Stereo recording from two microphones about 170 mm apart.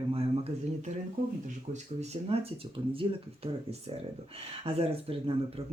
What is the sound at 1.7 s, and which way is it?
Speech, 40° right (ahead or behind).